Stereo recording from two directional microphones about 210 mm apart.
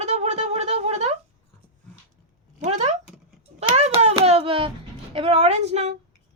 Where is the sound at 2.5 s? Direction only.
35° right (ahead or behind).